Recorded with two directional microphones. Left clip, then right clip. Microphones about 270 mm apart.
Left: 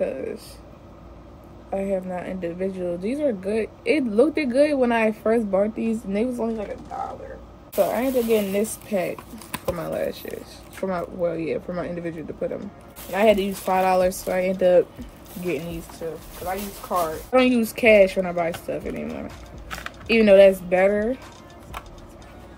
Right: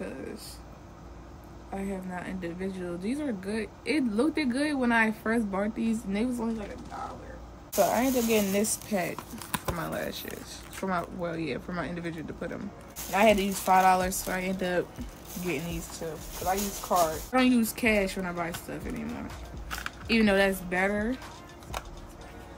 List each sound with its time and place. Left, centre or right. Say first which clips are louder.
0.0 s air conditioning: left 12 dB; centre
1.8 s speech: left 11 dB; centre
7.7 s speech: left 4 dB; right; by 14.9 s centre
16.0 s speech: left 2 dB; right
17.3 s speech: left 7 dB; centre